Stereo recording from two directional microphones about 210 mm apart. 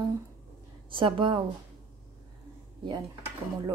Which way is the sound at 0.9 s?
25° right (ahead or behind).